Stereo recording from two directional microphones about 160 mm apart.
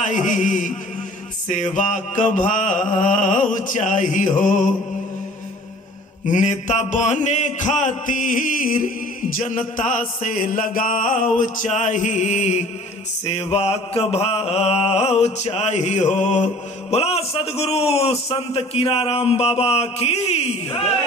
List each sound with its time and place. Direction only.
0.0 s mantra: 50° left (ahead or behind)
6.3 s mantra: 50° left (ahead or behind)
13.2 s a man's voice: 40° left (ahead or behind)